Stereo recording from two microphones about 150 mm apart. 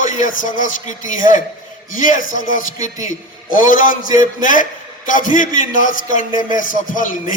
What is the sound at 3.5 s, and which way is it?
A man's voice, 60° left (ahead or behind).